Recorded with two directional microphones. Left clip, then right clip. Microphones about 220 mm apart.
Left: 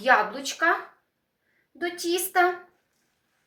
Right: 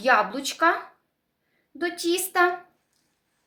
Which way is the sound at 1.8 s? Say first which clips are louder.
Right 2 dB; 45° right (ahead or behind).